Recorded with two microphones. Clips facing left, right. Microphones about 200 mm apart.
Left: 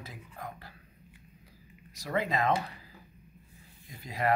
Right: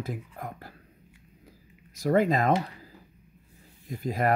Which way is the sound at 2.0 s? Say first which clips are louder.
Right 7 dB; 45° right (ahead or behind).